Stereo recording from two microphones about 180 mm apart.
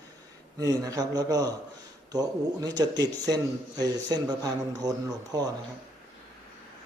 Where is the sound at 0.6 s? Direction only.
20° right (ahead or behind).